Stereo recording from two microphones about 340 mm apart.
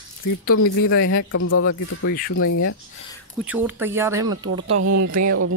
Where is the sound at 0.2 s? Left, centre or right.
Left.